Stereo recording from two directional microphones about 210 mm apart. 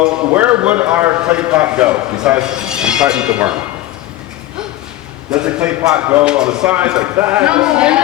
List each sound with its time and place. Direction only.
0.0 s a man's voice: 5° right (ahead or behind)
5.3 s a man's voice: 5° right (ahead or behind)